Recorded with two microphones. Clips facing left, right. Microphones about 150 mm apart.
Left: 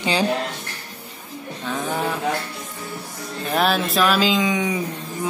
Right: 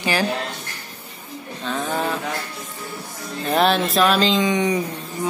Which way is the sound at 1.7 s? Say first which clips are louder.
Right 1 dB; 15° left (ahead or behind).